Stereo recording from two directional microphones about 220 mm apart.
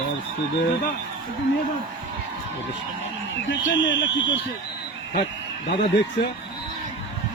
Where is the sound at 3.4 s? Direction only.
55° left (ahead or behind).